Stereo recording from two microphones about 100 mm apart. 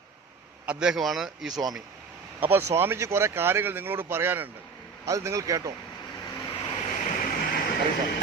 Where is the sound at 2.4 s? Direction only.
20° right (ahead or behind).